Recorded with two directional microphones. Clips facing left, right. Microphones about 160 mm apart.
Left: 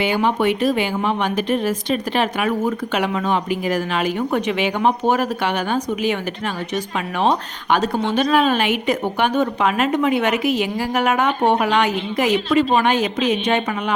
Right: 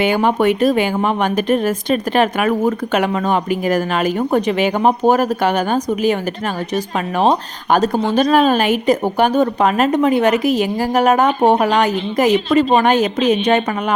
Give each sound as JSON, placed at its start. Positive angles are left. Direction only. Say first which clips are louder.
{"t": 0.0, "sound": "speech", "louder": "right 4 dB", "side_deg": -50}